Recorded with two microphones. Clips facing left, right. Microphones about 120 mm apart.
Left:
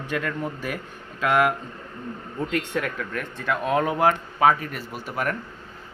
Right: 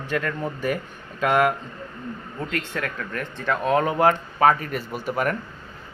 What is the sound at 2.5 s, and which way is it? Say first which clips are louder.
Speech: left 2 dB; 15° left (ahead or behind).